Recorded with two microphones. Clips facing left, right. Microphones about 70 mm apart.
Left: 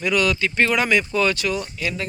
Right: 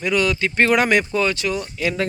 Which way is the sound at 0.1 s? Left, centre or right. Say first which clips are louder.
Right 1 dB; right.